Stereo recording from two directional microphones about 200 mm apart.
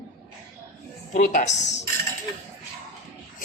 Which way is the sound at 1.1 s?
40° left (ahead or behind).